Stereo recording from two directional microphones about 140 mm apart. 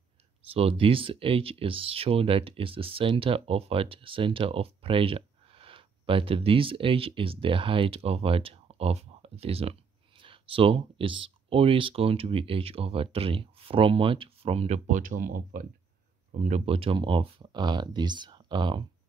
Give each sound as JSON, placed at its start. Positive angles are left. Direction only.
{"t": 0.5, "sound": "speech", "side_deg": -45}
{"t": 14.9, "sound": "speech", "side_deg": -75}
{"t": 16.3, "sound": "speech", "side_deg": -55}